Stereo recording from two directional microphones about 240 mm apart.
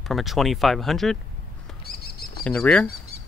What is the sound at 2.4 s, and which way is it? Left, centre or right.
Speech, centre.